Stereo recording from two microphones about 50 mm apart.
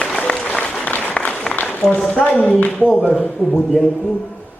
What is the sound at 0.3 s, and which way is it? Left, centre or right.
Applause, left.